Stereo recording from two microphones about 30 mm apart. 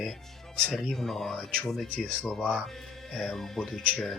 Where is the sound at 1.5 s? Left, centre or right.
Left.